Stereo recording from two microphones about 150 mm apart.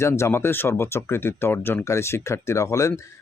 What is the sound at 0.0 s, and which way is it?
Speech, 20° left (ahead or behind).